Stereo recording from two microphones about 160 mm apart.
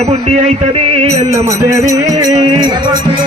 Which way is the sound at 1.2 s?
20° right (ahead or behind).